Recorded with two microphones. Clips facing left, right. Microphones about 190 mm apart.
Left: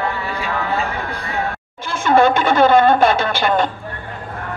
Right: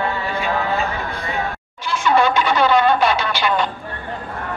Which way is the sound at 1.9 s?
50° left (ahead or behind).